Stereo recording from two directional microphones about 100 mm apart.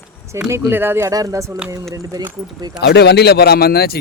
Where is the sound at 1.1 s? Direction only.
35° right (ahead or behind).